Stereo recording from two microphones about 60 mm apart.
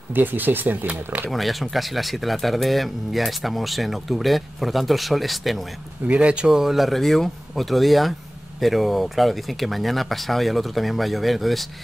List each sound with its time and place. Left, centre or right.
0.1 s speech: right
1.3 s speech: centre
6.0 s speech: right; by 11.6 s centre